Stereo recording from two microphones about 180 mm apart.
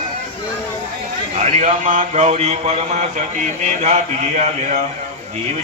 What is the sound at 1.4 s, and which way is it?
A man's voice, 40° right (ahead or behind).